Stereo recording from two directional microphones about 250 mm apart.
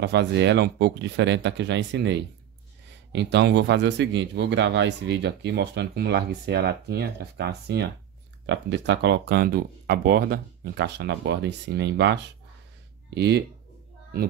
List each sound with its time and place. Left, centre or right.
0.0 s a man's voice: right